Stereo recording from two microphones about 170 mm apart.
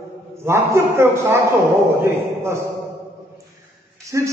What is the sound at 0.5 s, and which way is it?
A man's voice, 15° right (ahead or behind).